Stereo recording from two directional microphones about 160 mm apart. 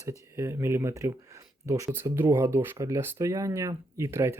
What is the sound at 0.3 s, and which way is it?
Speech, 15° right (ahead or behind).